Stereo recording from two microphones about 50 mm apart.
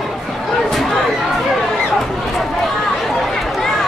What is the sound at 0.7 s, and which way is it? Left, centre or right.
Chatter, centre.